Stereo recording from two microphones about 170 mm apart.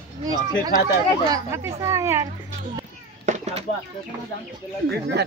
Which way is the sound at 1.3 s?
15° right (ahead or behind).